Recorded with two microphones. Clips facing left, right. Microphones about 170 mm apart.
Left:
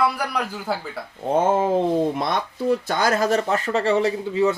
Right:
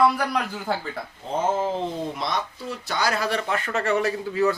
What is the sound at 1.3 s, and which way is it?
Speech, 55° left (ahead or behind).